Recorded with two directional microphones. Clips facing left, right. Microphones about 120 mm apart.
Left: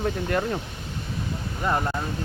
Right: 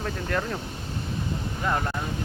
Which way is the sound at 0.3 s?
10° left (ahead or behind).